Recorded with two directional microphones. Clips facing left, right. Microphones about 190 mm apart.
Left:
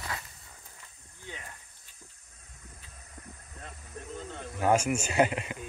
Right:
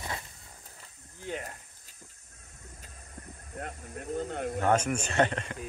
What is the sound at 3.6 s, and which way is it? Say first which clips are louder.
Snake: right 6 dB; 60° right (ahead or behind).